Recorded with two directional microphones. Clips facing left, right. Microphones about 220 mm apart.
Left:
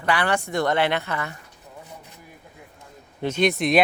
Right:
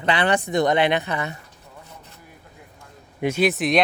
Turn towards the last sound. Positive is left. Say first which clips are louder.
# even
turn(degrees=0)  # may be behind; listen again after turning